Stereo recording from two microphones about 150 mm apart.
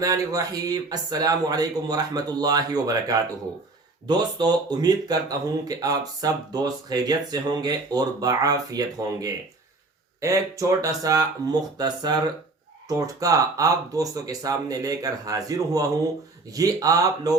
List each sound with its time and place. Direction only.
0.0 s speech: 25° right (ahead or behind)